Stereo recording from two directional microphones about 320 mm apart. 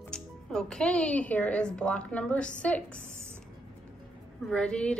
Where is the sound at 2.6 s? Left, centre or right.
Centre.